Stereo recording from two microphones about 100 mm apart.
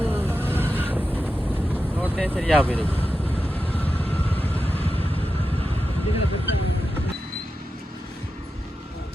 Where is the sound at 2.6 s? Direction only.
15° left (ahead or behind).